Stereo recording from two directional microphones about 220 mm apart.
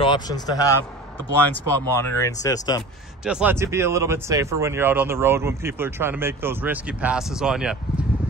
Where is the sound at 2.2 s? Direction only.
15° left (ahead or behind).